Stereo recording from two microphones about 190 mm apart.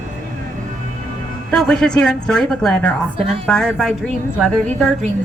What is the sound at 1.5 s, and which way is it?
A woman's voice, 5° left (ahead or behind).